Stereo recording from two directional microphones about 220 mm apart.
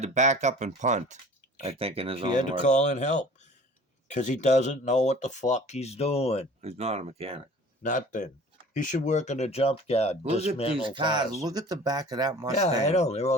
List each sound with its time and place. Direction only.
0.0 s speech: 30° right (ahead or behind)
2.4 s speech: 35° left (ahead or behind)
6.6 s speech: 30° right (ahead or behind)
7.8 s speech: 35° left (ahead or behind)
10.8 s speech: 20° right (ahead or behind)
12.8 s speech: 30° left (ahead or behind)